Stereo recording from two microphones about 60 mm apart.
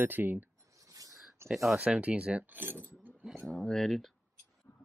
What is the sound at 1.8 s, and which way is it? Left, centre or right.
Speech, right.